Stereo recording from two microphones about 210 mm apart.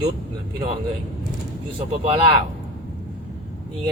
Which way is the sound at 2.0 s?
25° right (ahead or behind).